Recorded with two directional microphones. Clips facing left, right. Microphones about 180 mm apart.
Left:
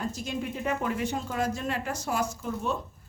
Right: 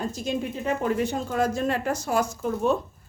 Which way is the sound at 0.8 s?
35° right (ahead or behind).